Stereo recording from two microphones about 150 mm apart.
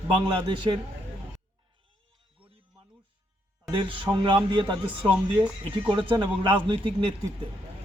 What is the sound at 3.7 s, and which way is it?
Speech, 35° right (ahead or behind).